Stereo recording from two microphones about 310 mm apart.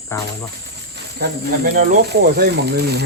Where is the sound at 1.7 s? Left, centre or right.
Right.